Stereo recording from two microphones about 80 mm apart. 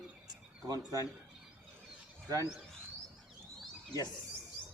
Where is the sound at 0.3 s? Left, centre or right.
Right.